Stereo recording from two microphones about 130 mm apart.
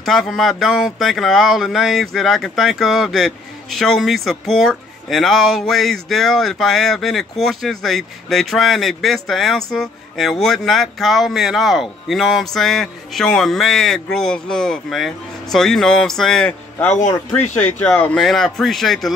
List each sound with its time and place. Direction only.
0.0 s speech: centre (ahead or behind)
16.9 s speech: 60° left (ahead or behind)
17.6 s speech: 15° left (ahead or behind)